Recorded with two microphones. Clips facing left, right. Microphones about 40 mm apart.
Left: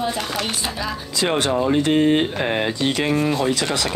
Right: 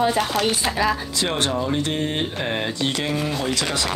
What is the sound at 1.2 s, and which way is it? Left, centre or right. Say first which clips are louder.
Speech: left 3 dB; left.